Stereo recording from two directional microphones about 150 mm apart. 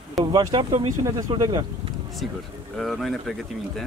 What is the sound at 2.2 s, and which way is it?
Speech, centre (ahead or behind).